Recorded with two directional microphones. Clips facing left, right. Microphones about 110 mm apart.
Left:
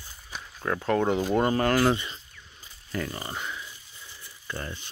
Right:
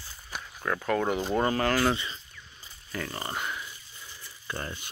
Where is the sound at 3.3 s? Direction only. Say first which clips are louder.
Right 1 dB; 10° right (ahead or behind).